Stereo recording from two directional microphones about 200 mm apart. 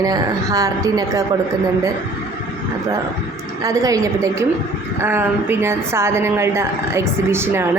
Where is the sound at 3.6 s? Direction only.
15° right (ahead or behind).